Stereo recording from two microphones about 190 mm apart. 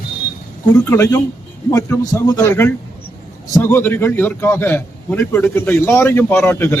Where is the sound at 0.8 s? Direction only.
15° left (ahead or behind).